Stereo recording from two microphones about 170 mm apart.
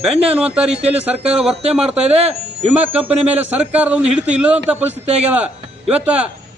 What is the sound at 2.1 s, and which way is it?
A man's voice, 40° right (ahead or behind).